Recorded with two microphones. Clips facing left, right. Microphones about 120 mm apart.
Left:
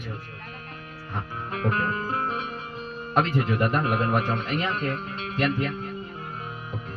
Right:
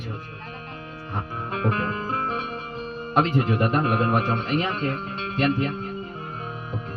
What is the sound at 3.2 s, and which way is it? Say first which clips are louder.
A man's voice: right 2 dB; 25° right (ahead or behind).